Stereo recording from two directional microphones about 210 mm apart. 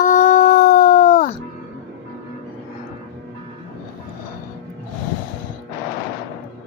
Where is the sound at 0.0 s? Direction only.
35° left (ahead or behind).